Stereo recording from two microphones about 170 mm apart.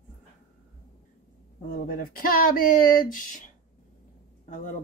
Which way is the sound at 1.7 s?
60° left (ahead or behind).